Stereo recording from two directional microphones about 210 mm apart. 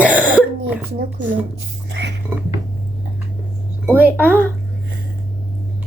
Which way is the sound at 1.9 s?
55° right (ahead or behind).